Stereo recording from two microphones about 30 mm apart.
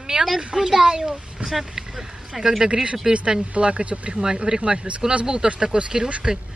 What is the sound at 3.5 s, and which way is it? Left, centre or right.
Speech, right.